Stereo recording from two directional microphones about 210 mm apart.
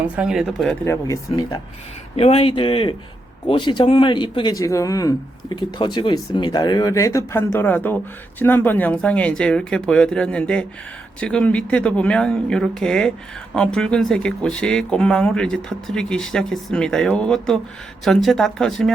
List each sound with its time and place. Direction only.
0.2 s speech: centre (ahead or behind)
0.9 s speech: 15° left (ahead or behind)
2.1 s a man's voice: 30° left (ahead or behind); by 18.9 s centre (ahead or behind)